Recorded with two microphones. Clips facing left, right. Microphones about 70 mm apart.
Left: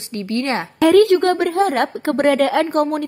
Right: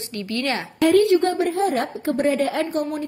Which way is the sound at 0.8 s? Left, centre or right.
Left.